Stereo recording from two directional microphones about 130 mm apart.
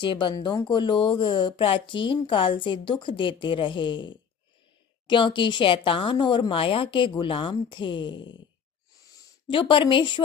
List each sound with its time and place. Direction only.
0.0 s speech: 40° left (ahead or behind)
9.5 s speech: 40° left (ahead or behind)